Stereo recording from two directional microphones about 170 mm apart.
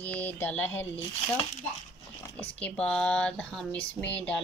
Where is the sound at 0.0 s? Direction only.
10° left (ahead or behind).